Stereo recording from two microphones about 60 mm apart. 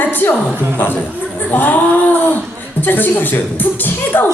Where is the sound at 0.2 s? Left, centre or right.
Left.